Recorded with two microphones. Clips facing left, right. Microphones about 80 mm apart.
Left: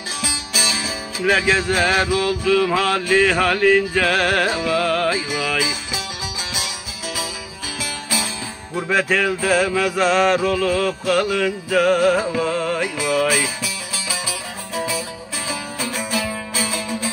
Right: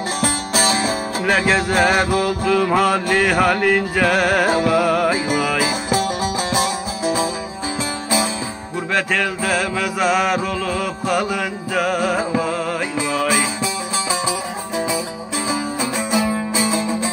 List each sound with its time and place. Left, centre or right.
0.2 s music: right
1.2 s music: centre
3.9 s mantra: centre
5.6 s music: right
8.9 s mantra: centre
12.4 s music: centre
15.4 s music: right